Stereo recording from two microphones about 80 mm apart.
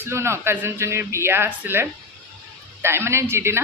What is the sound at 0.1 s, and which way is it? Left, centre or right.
Speech, right.